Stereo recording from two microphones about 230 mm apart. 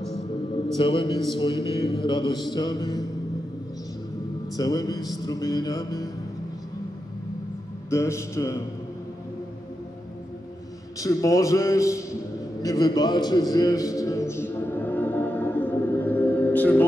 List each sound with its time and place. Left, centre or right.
0.7 s music: left
4.6 s music: centre
7.9 s music: centre
11.0 s music: centre
12.6 s a sound: centre